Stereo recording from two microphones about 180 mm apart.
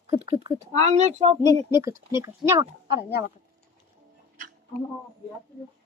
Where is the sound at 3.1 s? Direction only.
65° left (ahead or behind).